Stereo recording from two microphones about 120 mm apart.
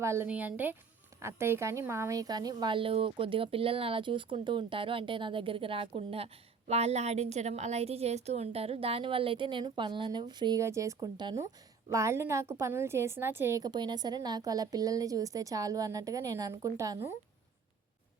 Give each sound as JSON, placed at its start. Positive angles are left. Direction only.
{"t": 0.0, "sound": "a woman's voice", "side_deg": -25}
{"t": 10.6, "sound": "a woman's voice", "side_deg": -25}
{"t": 13.6, "sound": "a woman's voice", "side_deg": -35}